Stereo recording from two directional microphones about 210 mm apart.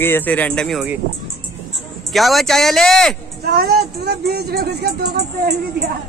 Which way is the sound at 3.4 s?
50° right (ahead or behind).